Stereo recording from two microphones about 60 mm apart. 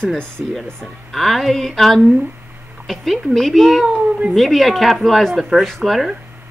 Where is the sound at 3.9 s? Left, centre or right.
Centre.